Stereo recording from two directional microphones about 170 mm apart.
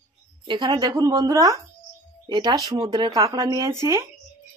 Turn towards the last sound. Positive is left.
turn(degrees=-15)  # may be behind; listen again after turning